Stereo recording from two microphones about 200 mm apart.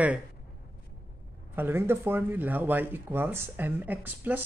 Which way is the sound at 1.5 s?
10° right (ahead or behind).